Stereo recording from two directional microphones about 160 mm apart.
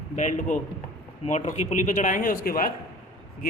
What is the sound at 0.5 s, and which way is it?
A man's voice, 50° left (ahead or behind).